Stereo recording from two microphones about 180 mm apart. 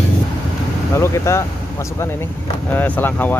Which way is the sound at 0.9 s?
15° left (ahead or behind).